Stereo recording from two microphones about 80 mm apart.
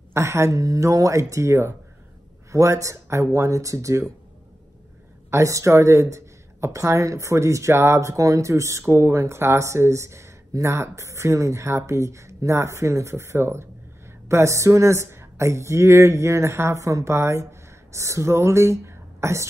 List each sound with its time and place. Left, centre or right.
0.1 s speech: right
5.3 s speech: right